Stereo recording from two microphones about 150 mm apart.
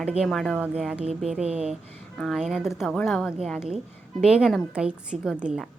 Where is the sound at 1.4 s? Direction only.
45° right (ahead or behind).